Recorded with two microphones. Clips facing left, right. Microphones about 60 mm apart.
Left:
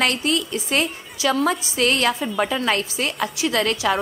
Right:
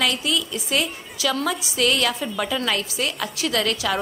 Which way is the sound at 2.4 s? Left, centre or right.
Left.